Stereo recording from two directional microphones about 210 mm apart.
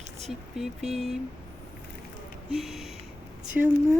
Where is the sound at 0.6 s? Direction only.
Centre (ahead or behind).